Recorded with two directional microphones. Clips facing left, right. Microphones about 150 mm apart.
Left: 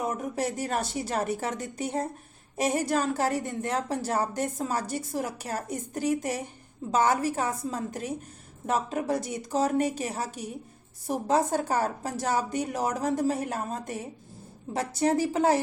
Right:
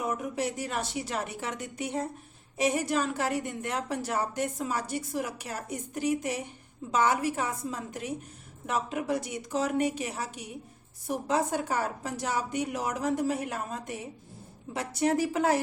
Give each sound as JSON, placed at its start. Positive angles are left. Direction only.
{"t": 0.0, "sound": "a woman's voice", "side_deg": 40}